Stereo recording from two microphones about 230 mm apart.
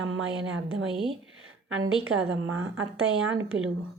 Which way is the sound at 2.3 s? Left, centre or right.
Right.